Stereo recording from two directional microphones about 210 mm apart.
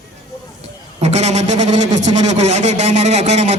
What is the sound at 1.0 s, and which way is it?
A man's voice, 30° right (ahead or behind).